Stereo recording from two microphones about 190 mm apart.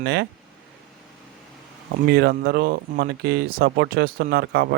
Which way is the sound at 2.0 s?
60° right (ahead or behind).